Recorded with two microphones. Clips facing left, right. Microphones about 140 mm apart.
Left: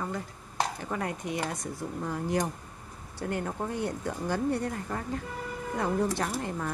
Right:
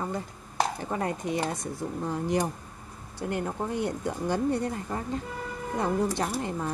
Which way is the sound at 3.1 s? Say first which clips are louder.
Right 2 dB; 20° right (ahead or behind).